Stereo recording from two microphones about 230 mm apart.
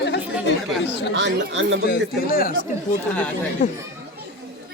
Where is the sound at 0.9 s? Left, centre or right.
Left.